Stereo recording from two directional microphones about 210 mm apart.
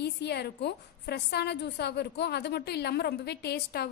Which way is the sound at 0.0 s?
50° left (ahead or behind).